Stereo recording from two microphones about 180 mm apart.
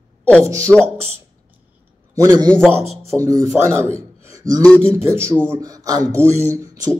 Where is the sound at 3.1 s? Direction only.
5° right (ahead or behind).